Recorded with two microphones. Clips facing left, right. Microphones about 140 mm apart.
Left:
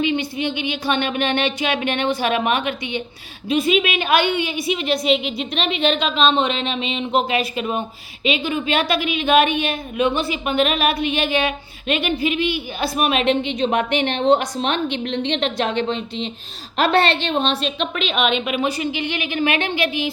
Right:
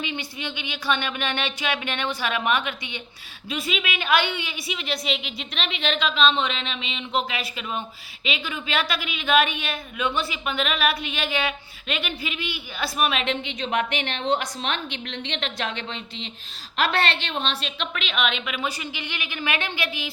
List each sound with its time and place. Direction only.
0.0 s speech: 20° left (ahead or behind)
6.3 s a sound: 50° left (ahead or behind)
7.1 s speech: 20° left (ahead or behind)